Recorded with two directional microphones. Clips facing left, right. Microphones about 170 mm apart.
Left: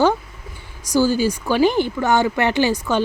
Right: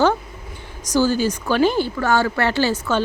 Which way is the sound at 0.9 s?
10° left (ahead or behind).